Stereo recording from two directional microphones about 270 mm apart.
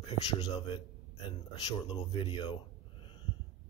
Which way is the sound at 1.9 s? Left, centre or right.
Centre.